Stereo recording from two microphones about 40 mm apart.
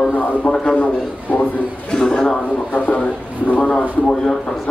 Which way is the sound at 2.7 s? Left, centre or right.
Left.